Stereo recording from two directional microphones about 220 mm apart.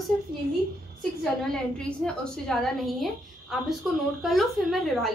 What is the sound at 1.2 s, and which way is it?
A woman's voice, 5° left (ahead or behind).